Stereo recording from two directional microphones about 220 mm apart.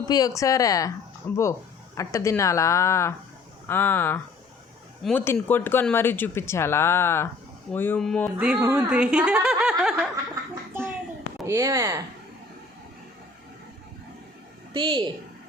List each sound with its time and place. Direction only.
0.1 s speech: 15° left (ahead or behind)
8.4 s speech: 5° right (ahead or behind)
11.4 s speech: 15° right (ahead or behind)
14.7 s a woman's voice: 20° right (ahead or behind)